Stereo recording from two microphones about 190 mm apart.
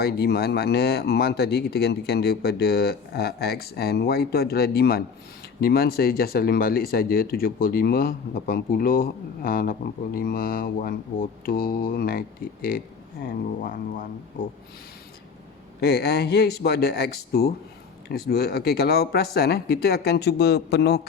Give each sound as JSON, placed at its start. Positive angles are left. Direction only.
{"t": 0.0, "sound": "speech", "side_deg": 55}
{"t": 13.2, "sound": "speech", "side_deg": 45}
{"t": 15.8, "sound": "speech", "side_deg": 60}